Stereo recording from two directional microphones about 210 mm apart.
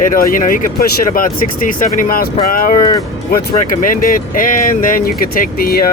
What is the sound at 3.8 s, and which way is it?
Speech, 40° left (ahead or behind).